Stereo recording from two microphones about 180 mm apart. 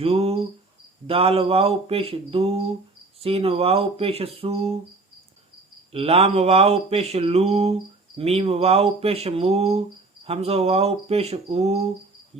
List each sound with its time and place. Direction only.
0.0 s speech: 35° right (ahead or behind)
5.9 s speech: 35° right (ahead or behind)